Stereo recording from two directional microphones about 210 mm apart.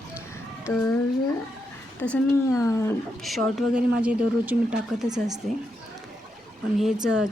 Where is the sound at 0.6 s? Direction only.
10° left (ahead or behind).